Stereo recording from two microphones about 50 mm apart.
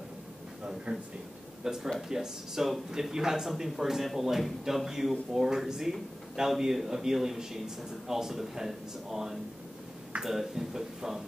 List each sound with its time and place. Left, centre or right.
0.9 s speech: right
1.6 s speech: centre